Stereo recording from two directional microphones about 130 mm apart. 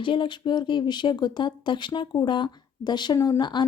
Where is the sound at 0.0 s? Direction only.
40° left (ahead or behind).